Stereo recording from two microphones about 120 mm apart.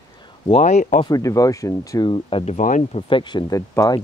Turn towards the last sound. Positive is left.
turn(degrees=30)  # may be behind; listen again after turning